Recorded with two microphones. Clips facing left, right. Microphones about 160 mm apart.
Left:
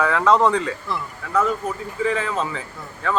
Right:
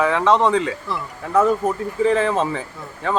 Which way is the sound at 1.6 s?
45° right (ahead or behind).